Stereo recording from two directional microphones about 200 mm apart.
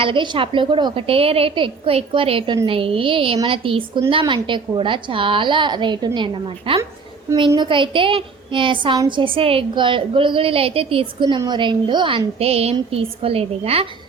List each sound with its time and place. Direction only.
0.0 s a woman's voice: 25° right (ahead or behind)